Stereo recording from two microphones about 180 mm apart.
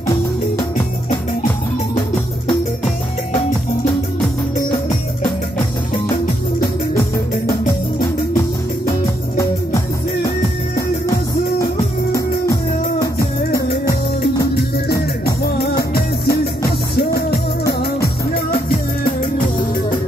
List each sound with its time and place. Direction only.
15.5 s music: 60° left (ahead or behind)